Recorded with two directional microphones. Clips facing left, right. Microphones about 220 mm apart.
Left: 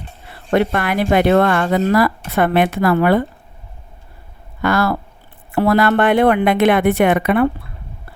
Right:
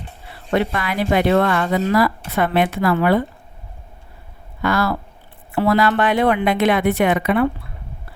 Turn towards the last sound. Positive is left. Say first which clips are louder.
# left 3 dB
turn(degrees=55)  # may be behind; listen again after turning